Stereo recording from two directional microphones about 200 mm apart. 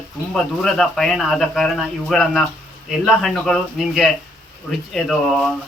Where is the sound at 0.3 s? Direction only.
Centre (ahead or behind).